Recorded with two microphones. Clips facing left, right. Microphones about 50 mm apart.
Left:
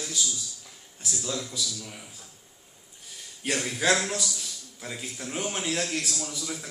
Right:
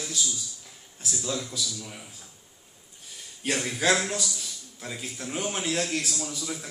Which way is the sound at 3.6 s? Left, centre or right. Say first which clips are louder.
Even; centre.